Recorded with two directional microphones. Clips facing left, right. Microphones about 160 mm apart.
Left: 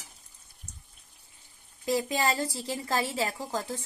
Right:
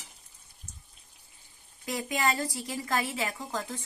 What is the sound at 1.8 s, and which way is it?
Speech, 30° left (ahead or behind).